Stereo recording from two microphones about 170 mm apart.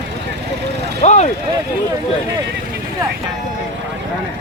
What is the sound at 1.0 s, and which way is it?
Speech, 40° left (ahead or behind).